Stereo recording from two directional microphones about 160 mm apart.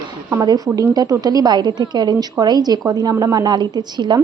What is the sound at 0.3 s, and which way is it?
A woman's voice, 20° right (ahead or behind).